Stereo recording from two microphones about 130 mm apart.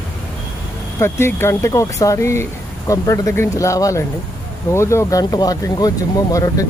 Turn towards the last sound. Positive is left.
turn(degrees=25)  # may be behind; listen again after turning